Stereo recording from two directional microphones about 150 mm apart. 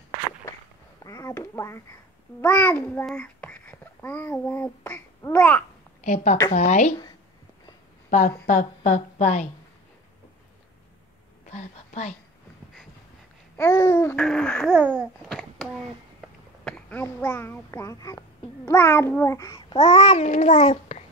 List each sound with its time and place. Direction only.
1.0 s speech: 20° left (ahead or behind)
2.4 s babbling: 10° left (ahead or behind)
3.1 s a child's voice: 10° left (ahead or behind)
6.0 s a woman's voice: 50° left (ahead or behind)
8.1 s a woman's voice: 55° left (ahead or behind)
11.5 s a sound: 45° left (ahead or behind)
13.6 s babbling: 15° left (ahead or behind)
14.7 s babbling: 10° right (ahead or behind)
15.2 s a sound: centre (ahead or behind)
16.6 s a child's voice: 10° left (ahead or behind)
18.7 s babbling: 15° left (ahead or behind)
19.7 s a woman's voice: 45° left (ahead or behind)